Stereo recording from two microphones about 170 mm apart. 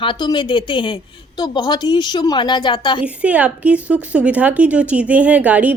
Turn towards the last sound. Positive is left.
turn(degrees=-10)  # may be behind; listen again after turning